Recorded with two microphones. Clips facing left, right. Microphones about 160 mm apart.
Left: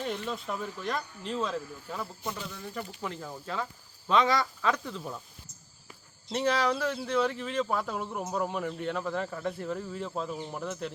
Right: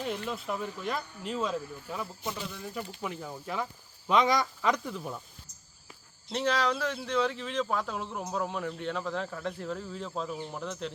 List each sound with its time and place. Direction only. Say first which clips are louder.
0.0 s speech: even; 5° right (ahead or behind)
6.3 s speech: left 1 dB; 10° left (ahead or behind)